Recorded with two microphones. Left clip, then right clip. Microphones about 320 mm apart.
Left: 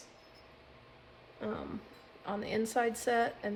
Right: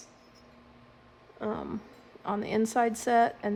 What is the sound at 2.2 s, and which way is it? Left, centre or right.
Speech, right.